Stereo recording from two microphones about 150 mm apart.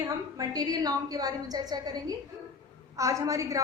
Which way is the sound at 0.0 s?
25° right (ahead or behind).